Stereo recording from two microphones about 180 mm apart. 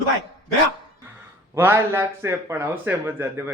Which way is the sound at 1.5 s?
15° right (ahead or behind).